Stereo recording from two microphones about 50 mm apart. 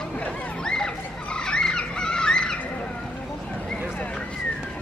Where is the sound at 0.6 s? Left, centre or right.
Centre.